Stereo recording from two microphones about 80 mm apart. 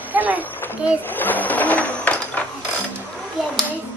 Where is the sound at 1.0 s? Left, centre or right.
Left.